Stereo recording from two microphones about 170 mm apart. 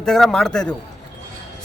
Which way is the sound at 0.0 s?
5° left (ahead or behind).